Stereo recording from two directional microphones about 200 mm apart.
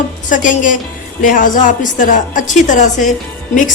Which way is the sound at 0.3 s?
40° left (ahead or behind).